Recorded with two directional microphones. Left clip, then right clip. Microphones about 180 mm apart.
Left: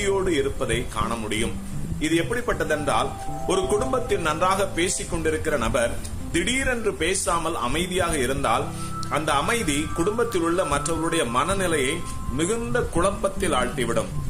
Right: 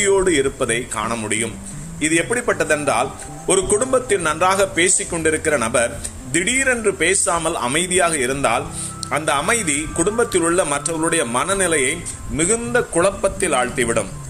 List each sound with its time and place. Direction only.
0.0 s a man's voice: 15° right (ahead or behind)